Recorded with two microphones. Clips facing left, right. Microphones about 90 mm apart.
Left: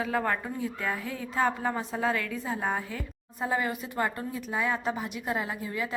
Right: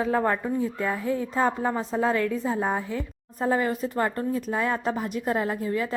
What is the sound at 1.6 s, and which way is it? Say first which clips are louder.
Speech: right 4 dB; 10° right (ahead or behind).